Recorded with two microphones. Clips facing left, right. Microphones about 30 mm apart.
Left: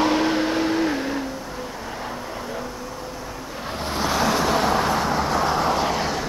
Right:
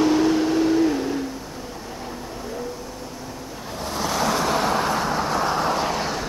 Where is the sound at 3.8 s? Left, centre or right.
Left.